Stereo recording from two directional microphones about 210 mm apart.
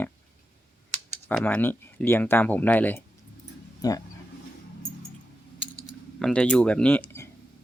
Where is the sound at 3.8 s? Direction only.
20° left (ahead or behind).